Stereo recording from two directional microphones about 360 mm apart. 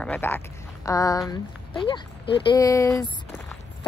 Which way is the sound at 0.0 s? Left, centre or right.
Centre.